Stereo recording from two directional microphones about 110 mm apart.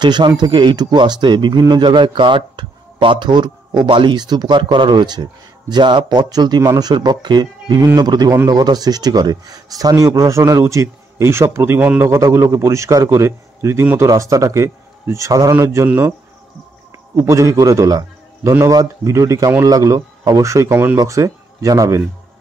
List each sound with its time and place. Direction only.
0.0 s a man's voice: 40° right (ahead or behind)